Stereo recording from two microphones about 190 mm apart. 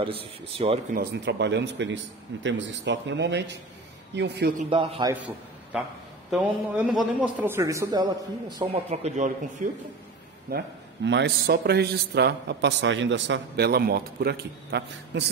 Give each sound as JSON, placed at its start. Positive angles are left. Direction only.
{"t": 0.6, "sound": "speech", "side_deg": -35}
{"t": 0.9, "sound": "a man's voice", "side_deg": -65}
{"t": 4.6, "sound": "a man's voice", "side_deg": -25}
{"t": 5.1, "sound": "a man's voice", "side_deg": -5}
{"t": 8.9, "sound": "speech", "side_deg": -35}
{"t": 10.5, "sound": "a man's voice", "side_deg": -55}